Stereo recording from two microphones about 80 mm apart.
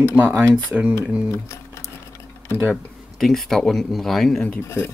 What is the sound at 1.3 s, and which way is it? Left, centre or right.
Typing, left.